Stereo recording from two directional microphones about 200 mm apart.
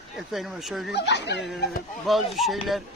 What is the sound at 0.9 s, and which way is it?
Speech, 60° left (ahead or behind).